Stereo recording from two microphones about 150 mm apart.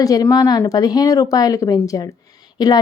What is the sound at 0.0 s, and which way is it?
Speech, 25° left (ahead or behind).